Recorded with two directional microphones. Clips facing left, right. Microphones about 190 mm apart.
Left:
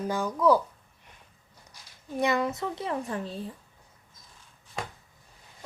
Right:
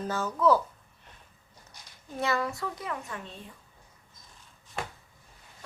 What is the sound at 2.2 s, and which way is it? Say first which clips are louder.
A child's voice: left 3 dB; 20° left (ahead or behind).